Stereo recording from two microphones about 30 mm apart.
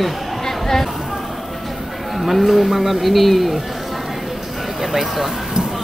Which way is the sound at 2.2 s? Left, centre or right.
Centre.